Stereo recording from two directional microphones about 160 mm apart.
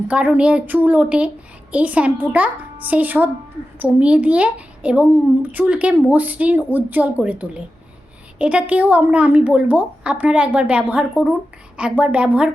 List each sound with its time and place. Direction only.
0.1 s speech: 10° right (ahead or behind)